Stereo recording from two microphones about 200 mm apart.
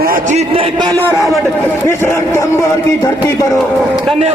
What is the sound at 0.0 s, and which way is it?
Speech, 40° right (ahead or behind).